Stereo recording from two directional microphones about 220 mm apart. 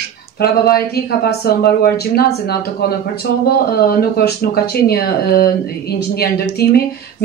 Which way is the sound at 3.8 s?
45° left (ahead or behind).